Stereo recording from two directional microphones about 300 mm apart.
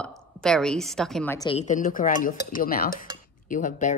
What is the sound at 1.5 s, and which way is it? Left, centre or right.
Speech, left.